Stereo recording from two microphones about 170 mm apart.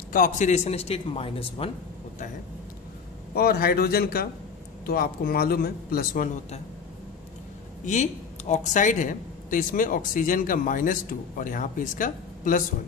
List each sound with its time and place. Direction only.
0.1 s speech: 50° left (ahead or behind); by 1.7 s 35° left (ahead or behind)
3.3 s a man's voice: 65° left (ahead or behind)
7.8 s speech: 45° left (ahead or behind)